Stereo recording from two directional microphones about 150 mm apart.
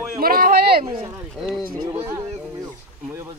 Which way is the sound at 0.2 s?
80° right.